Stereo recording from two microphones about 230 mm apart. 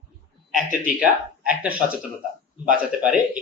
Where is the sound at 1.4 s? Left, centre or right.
Centre.